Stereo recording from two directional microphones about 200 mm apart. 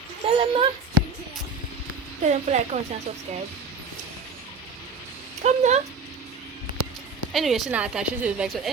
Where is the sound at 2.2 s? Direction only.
35° right (ahead or behind).